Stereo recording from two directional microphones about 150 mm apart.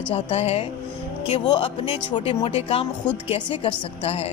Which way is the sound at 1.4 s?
30° left (ahead or behind).